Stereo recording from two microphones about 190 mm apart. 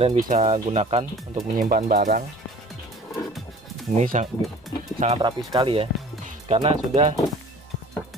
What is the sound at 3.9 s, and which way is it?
Speech, 40° right (ahead or behind).